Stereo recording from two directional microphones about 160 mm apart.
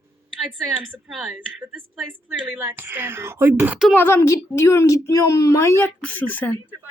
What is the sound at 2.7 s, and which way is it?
A woman's voice, 15° right (ahead or behind).